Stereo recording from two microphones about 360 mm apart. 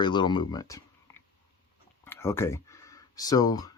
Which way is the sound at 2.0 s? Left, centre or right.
Centre.